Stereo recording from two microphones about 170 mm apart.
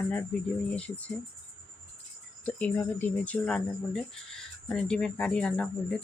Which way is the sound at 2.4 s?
10° left (ahead or behind).